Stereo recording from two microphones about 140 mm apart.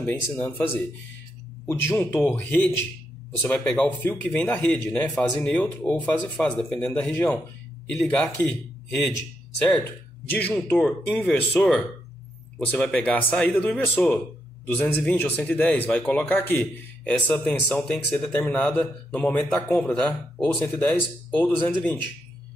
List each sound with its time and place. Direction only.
0.0 s a man's voice: 10° left (ahead or behind)
1.7 s a man's voice: 15° left (ahead or behind)
10.3 s a man's voice: 10° left (ahead or behind)